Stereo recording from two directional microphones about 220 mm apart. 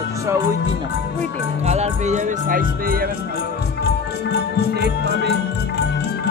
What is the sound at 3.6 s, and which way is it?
Music, 50° left (ahead or behind).